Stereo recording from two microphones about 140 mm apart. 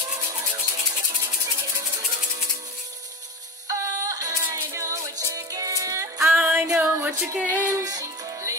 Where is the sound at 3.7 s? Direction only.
25° right (ahead or behind).